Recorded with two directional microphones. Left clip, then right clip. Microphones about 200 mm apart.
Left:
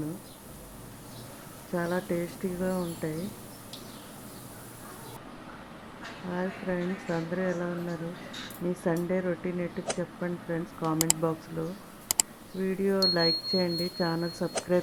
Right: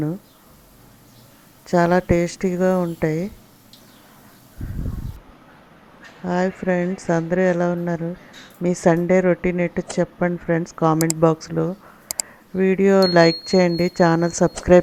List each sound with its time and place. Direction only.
1.7 s a woman's voice: 45° right (ahead or behind)
6.2 s a woman's voice: 45° right (ahead or behind)
10.9 s speech: centre (ahead or behind)
11.2 s speech: 40° right (ahead or behind)
12.1 s a sound: centre (ahead or behind)
12.5 s a woman's voice: 45° right (ahead or behind)